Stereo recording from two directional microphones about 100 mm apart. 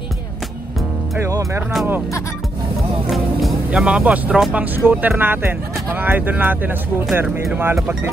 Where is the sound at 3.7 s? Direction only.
10° right (ahead or behind).